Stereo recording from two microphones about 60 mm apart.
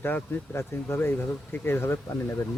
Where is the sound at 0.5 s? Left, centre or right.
Left.